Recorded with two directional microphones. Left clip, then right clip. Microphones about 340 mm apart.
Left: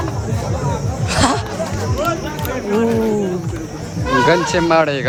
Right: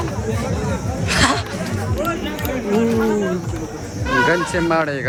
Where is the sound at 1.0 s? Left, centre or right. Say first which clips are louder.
Even; centre.